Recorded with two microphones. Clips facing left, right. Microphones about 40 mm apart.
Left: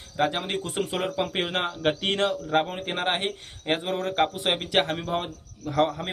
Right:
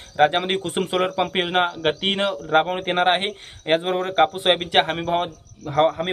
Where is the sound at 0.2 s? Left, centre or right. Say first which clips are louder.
Right 7 dB; right.